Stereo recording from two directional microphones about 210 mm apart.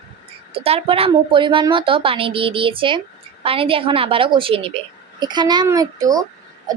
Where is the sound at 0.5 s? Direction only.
25° right (ahead or behind).